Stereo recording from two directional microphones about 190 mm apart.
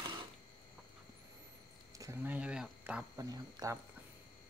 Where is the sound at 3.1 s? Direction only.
20° right (ahead or behind).